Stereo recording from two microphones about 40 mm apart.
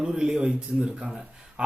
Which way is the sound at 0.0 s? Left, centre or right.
Centre.